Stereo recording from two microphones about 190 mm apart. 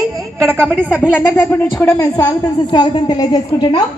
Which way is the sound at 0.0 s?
15° right (ahead or behind).